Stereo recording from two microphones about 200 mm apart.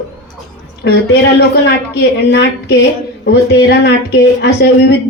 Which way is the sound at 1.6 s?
55° left (ahead or behind).